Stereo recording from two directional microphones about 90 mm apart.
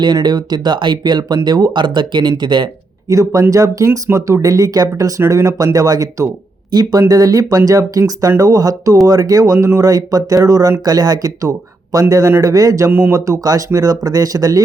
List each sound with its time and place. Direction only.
0.0 s speech: 55° right (ahead or behind)
3.1 s speech: 40° right (ahead or behind)
12.9 s speech: 25° right (ahead or behind)
13.1 s speech: 40° right (ahead or behind)